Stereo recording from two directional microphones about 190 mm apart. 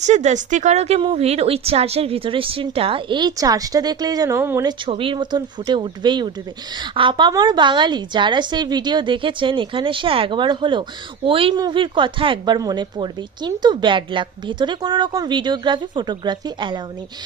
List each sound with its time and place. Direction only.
0.0 s a woman's voice: 40° right (ahead or behind); by 4.7 s 15° right (ahead or behind)
4.9 s a woman's voice: 30° right (ahead or behind)